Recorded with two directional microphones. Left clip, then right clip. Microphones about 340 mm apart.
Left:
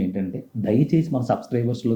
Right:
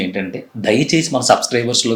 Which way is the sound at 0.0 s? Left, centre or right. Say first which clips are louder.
Right 6 dB; centre.